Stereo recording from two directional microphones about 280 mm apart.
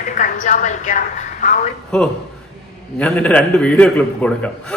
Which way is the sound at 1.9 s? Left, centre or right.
Centre.